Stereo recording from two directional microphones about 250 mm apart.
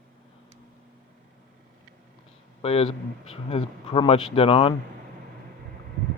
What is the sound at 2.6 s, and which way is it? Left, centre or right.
A man's voice, left.